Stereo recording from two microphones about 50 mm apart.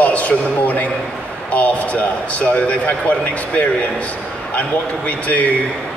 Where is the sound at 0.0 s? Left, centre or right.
Left.